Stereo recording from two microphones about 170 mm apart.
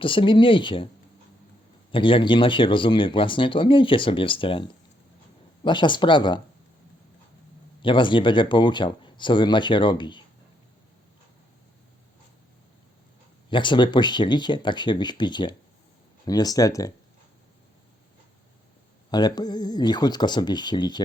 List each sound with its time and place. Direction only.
0.0 s speech: 30° left (ahead or behind)
1.9 s speech: 30° left (ahead or behind)
7.8 s speech: 30° left (ahead or behind)
13.5 s speech: 30° left (ahead or behind)
19.1 s speech: 25° left (ahead or behind)